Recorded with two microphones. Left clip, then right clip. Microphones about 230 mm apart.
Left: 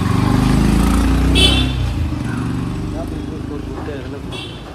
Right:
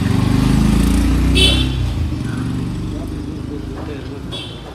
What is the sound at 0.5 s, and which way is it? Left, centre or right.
Vehicle, centre.